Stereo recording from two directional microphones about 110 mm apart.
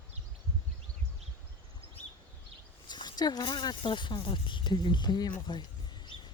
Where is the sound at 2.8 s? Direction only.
40° left (ahead or behind).